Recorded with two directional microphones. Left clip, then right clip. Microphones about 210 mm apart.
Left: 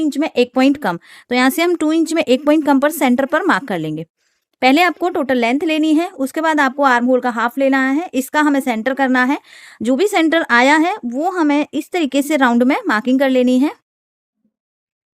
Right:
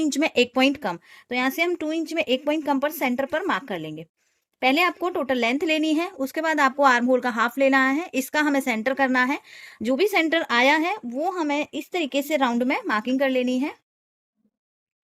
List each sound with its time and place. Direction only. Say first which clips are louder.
0.0 s speech: left 5 dB; 20° left (ahead or behind); by 13.7 s 55° left (ahead or behind)